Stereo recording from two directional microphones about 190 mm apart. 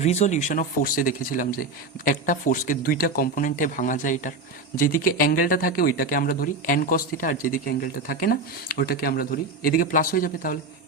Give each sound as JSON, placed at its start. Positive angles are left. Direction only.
{"t": 0.0, "sound": "speech", "side_deg": 35}